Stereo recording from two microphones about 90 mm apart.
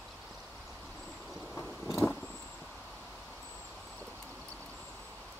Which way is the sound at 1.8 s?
30° left (ahead or behind).